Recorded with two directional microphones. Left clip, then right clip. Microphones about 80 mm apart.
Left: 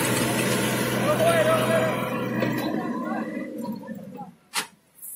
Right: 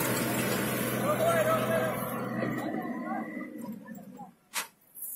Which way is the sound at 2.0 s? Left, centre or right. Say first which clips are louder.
Left 7 dB; left.